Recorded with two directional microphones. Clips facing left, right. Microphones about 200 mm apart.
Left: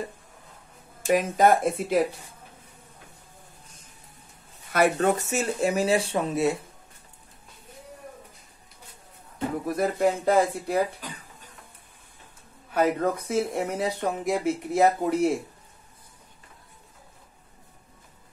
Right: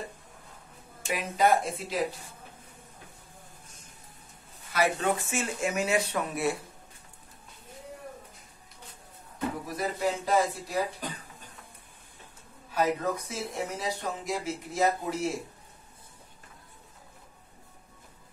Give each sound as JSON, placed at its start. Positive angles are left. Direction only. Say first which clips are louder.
{"t": 1.0, "sound": "speech", "louder": "left 6 dB", "side_deg": 45}
{"t": 4.7, "sound": "speech", "louder": "left 5 dB", "side_deg": 50}
{"t": 9.7, "sound": "speech", "louder": "left 8 dB", "side_deg": 55}
{"t": 12.7, "sound": "speech", "louder": "left 4 dB", "side_deg": 55}